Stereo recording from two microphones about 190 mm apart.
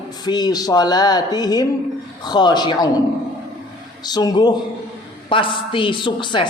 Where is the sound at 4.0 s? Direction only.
20° left (ahead or behind).